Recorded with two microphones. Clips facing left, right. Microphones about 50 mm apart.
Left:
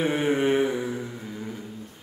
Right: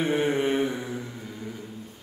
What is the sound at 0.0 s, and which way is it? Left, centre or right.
Mantra, centre.